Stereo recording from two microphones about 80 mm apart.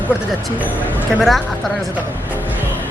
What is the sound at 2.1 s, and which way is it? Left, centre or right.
Speech, left.